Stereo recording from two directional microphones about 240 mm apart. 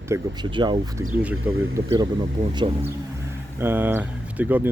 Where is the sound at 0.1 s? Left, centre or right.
Centre.